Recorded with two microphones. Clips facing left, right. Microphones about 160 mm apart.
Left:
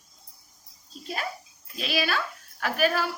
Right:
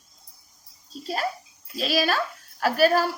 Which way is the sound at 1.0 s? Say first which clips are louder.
Right 5 dB; 40° right (ahead or behind).